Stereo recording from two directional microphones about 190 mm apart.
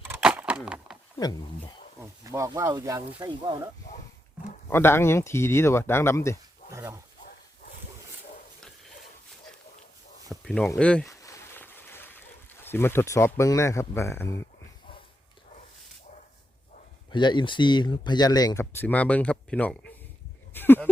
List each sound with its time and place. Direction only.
0.1 s a sound: 5° right (ahead or behind)
1.2 s speech: 20° left (ahead or behind)
2.0 s speech: 15° right (ahead or behind)
4.7 s speech: 10° left (ahead or behind)
6.7 s dog: 15° right (ahead or behind)
10.4 s speech: centre (ahead or behind)
11.0 s a sound: 15° left (ahead or behind)
17.1 s speech: 25° left (ahead or behind)
18.6 s speech: 10° left (ahead or behind)
20.5 s a sound: 10° left (ahead or behind)